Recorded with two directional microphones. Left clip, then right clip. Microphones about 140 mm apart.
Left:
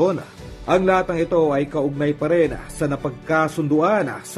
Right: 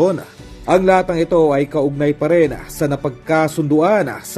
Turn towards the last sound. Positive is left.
turn(degrees=-30)  # may be behind; listen again after turning